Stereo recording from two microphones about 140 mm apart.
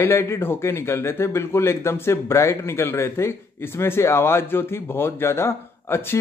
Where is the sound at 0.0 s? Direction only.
20° left (ahead or behind).